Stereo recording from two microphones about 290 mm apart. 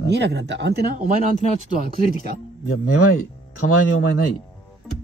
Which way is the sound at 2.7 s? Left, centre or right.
Left.